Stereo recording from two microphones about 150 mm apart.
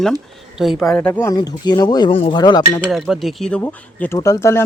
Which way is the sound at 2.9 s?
Centre (ahead or behind).